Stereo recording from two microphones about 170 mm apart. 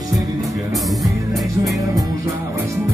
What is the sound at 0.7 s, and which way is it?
Music, centre (ahead or behind).